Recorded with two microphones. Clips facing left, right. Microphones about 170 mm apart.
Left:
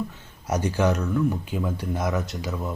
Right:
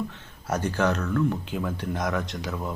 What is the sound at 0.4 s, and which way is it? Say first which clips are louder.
Speech: left 2 dB; 15° left (ahead or behind).